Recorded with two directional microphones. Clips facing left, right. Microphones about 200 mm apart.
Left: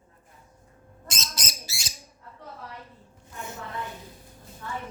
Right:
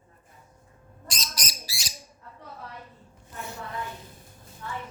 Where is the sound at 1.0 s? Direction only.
25° left (ahead or behind).